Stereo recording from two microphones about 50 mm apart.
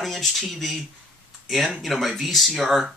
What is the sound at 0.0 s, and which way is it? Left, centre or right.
Speech, centre.